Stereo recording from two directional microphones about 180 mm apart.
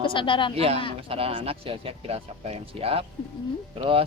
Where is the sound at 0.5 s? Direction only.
35° right (ahead or behind).